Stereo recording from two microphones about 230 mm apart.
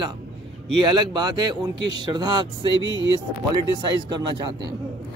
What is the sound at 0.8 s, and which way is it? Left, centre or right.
Speech, centre.